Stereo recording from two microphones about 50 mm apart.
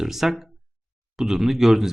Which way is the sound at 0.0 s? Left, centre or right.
Centre.